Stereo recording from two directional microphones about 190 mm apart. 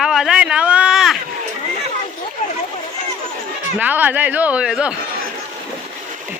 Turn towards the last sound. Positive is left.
turn(degrees=-5)  # may be behind; listen again after turning